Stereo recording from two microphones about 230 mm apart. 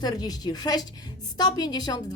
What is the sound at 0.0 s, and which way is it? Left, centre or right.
A woman's voice, centre.